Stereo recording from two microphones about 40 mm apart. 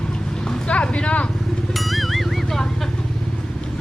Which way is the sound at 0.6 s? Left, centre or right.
Left.